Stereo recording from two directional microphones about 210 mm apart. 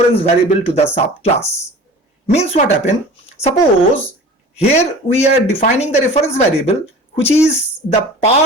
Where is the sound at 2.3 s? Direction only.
35° left (ahead or behind).